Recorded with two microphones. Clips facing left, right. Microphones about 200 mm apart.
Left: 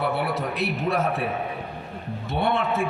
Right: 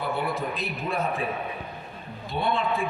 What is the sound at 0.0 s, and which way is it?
A man's voice, 70° left (ahead or behind).